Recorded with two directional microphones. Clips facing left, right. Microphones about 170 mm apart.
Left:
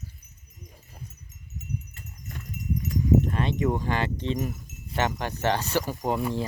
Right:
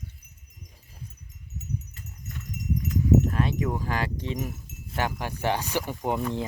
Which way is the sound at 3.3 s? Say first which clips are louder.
Left 1 dB; 5° right (ahead or behind).